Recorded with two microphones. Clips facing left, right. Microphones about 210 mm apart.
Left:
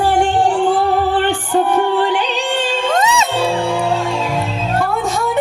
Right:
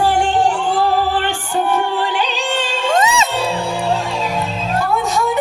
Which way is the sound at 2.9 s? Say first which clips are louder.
Right 2 dB; centre (ahead or behind).